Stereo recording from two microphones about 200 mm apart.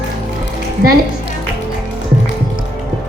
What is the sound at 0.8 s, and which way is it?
Speech, 45° right (ahead or behind).